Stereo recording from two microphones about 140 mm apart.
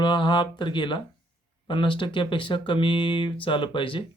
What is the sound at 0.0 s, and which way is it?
Speech, 35° left (ahead or behind).